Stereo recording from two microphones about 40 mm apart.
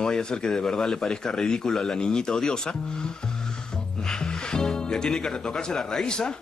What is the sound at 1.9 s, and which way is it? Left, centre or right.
Speech, centre.